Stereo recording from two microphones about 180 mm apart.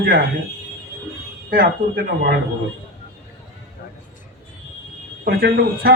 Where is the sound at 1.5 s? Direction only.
55° right (ahead or behind).